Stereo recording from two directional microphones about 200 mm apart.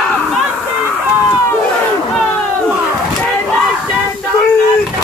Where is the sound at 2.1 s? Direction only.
5° right (ahead or behind).